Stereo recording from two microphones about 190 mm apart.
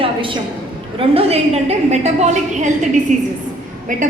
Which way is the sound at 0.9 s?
30° right (ahead or behind).